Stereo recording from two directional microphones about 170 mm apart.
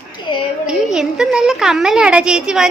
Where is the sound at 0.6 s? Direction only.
5° right (ahead or behind).